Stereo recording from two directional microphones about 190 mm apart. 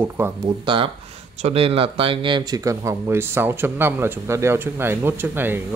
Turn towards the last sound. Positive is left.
turn(degrees=-10)  # may be behind; listen again after turning